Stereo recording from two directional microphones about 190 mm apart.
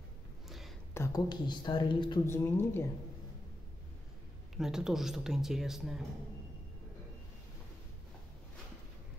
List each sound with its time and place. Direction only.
0.5 s a sound: centre (ahead or behind)
0.9 s a woman's voice: 15° left (ahead or behind)
2.2 s speech: 10° left (ahead or behind)
4.6 s speech: 5° right (ahead or behind)